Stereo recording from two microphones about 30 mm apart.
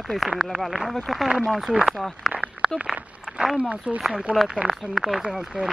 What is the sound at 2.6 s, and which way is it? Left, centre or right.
Speech, centre.